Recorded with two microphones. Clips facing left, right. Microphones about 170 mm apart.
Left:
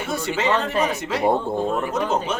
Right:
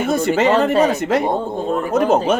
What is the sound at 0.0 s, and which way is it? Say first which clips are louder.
Speech: right 8 dB; 50° right (ahead or behind).